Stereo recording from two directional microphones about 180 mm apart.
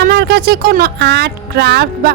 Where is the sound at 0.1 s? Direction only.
65° right (ahead or behind).